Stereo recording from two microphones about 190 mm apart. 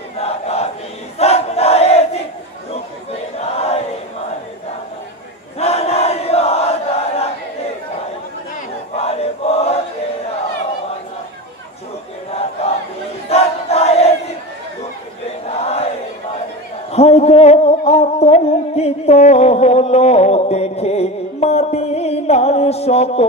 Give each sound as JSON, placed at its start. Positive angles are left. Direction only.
{"t": 0.2, "sound": "crowd", "side_deg": 35}
{"t": 3.3, "sound": "a sound", "side_deg": 35}
{"t": 5.6, "sound": "crowd", "side_deg": 35}
{"t": 8.9, "sound": "chant", "side_deg": 35}
{"t": 12.3, "sound": "battle cry", "side_deg": 30}
{"t": 13.3, "sound": "crowd", "side_deg": 35}
{"t": 15.6, "sound": "battle cry", "side_deg": 35}
{"t": 16.9, "sound": "music", "side_deg": 35}